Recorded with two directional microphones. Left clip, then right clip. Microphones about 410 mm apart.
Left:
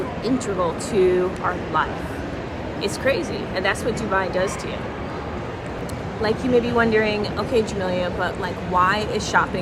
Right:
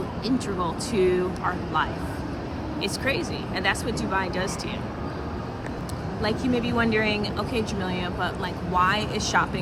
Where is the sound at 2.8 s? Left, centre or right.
Centre.